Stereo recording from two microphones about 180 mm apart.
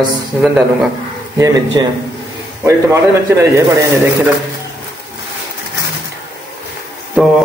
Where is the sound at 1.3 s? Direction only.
20° right (ahead or behind).